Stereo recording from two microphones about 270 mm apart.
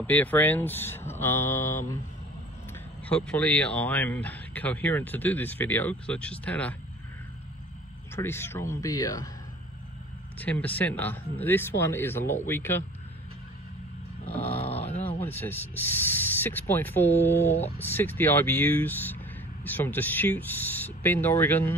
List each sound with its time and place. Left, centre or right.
0.0 s speech: centre
3.1 s speech: centre
8.2 s speech: centre
10.4 s speech: centre
14.2 s a sound: left
15.1 s speech: centre